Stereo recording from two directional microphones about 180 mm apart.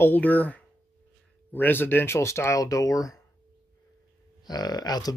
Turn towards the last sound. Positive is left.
turn(degrees=20)  # may be behind; listen again after turning